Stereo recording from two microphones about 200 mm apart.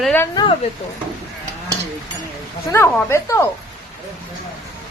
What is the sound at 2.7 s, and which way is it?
Speech, 15° left (ahead or behind).